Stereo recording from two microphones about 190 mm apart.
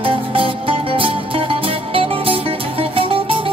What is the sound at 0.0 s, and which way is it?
Music, 30° right (ahead or behind).